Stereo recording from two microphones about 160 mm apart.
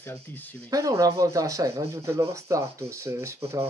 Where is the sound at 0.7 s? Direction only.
20° right (ahead or behind).